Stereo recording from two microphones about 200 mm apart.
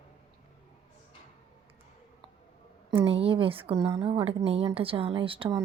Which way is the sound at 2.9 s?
25° right (ahead or behind).